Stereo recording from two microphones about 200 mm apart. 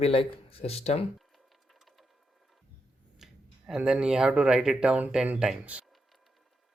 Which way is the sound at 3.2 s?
Centre (ahead or behind).